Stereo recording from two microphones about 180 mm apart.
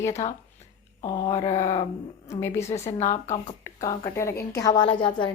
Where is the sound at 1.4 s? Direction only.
35° left (ahead or behind).